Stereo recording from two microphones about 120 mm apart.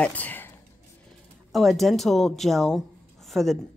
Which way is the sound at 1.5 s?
Centre (ahead or behind).